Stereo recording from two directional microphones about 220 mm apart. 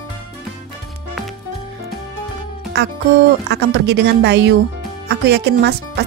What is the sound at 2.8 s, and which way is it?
Speech, 50° right (ahead or behind).